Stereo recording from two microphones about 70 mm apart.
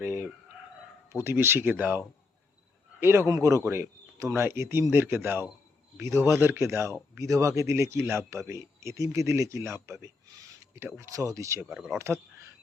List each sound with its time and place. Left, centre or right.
0.0 s speech: right
3.0 s speech: right
3.2 s a man's voice: right
11.6 s speech: centre
11.9 s speech: right